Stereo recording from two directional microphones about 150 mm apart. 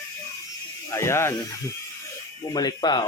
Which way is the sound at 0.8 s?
20° left (ahead or behind).